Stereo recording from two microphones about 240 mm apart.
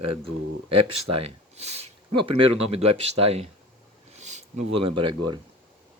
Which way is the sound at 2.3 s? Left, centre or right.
Right.